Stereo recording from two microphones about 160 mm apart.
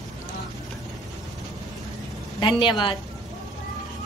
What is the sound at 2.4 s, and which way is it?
Speech, 30° left (ahead or behind).